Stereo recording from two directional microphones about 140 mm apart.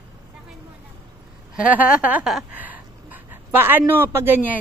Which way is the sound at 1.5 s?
10° right (ahead or behind).